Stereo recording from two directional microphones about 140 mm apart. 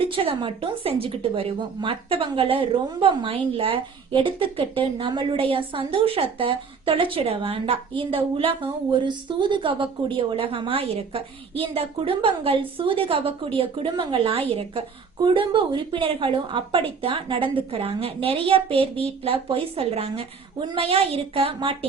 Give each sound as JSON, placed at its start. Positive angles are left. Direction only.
{"t": 0.1, "sound": "a woman's voice", "side_deg": -40}